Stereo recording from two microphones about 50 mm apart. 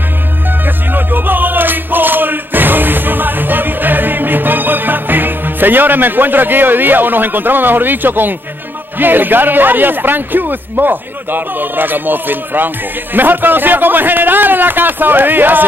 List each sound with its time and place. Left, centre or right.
0.7 s music: right
8.9 s a man's voice: right